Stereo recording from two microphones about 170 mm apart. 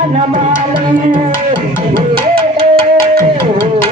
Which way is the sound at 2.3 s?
35° right (ahead or behind).